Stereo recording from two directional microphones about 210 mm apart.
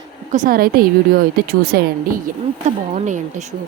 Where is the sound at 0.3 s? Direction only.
40° right (ahead or behind).